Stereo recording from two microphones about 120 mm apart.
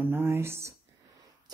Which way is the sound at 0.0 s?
20° right (ahead or behind).